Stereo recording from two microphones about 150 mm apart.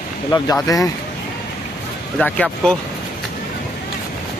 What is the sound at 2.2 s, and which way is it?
Speech, 10° left (ahead or behind).